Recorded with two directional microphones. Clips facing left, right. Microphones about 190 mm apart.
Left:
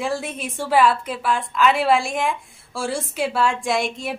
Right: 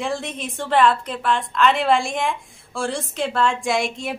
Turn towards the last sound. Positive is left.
turn(degrees=0)  # may be behind; listen again after turning